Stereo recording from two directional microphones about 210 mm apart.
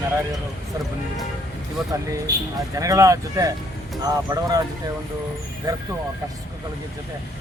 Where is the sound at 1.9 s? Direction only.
15° right (ahead or behind).